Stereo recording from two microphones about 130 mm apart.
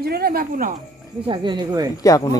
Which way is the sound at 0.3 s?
90° right.